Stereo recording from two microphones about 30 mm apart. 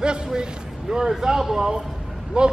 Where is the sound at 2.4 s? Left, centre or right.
Right.